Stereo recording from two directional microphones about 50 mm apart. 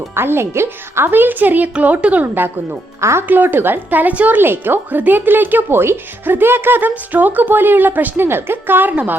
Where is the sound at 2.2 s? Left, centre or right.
Right.